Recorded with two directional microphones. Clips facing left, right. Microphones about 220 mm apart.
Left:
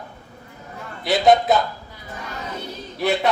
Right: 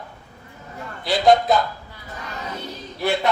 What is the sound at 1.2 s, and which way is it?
Speech, centre (ahead or behind).